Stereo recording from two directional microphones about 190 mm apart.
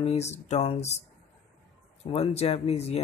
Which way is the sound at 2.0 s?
30° left (ahead or behind).